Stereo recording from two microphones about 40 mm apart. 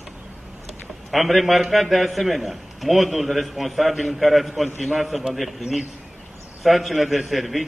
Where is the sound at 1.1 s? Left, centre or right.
Centre.